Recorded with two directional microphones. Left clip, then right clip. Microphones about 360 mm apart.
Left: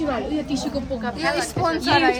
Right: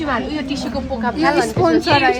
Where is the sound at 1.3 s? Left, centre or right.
Centre.